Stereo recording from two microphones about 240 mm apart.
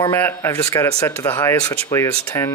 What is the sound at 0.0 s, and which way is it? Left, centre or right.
Speech, centre.